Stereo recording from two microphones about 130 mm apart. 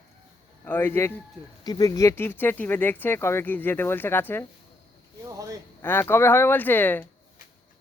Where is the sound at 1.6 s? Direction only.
30° left (ahead or behind).